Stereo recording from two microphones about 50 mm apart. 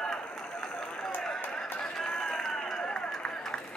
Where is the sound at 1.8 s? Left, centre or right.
Centre.